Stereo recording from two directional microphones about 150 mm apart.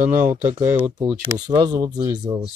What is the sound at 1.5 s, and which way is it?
Speech, 30° right (ahead or behind).